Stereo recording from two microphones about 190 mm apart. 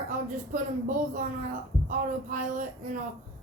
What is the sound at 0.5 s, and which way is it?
A woman's voice, 45° right (ahead or behind).